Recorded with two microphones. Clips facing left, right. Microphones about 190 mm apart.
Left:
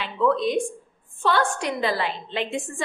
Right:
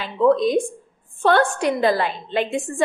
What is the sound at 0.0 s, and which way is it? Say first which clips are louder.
Speech: right 5 dB; 40° right (ahead or behind).